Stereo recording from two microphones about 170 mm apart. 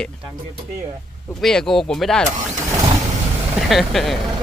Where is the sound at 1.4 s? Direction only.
5° left (ahead or behind).